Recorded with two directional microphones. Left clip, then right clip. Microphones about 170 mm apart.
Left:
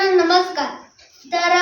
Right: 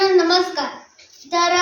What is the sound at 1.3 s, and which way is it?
Child singing, 15° left (ahead or behind).